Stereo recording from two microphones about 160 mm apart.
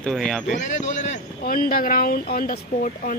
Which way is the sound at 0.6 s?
50° left (ahead or behind).